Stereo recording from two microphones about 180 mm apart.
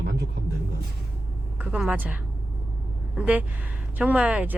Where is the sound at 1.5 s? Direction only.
5° right (ahead or behind).